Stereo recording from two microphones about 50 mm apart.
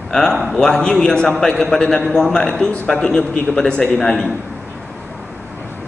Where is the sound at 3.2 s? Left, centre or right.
Left.